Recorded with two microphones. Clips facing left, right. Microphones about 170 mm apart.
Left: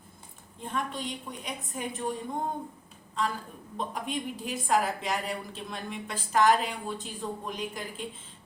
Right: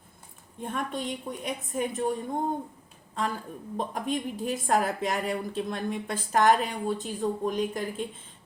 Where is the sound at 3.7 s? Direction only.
45° right (ahead or behind).